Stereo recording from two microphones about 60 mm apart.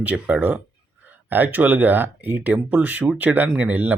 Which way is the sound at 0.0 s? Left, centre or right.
Right.